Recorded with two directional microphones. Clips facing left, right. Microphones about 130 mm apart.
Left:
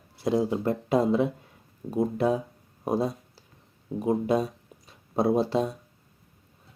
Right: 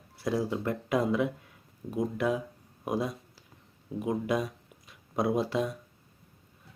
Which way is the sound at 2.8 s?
30° left (ahead or behind).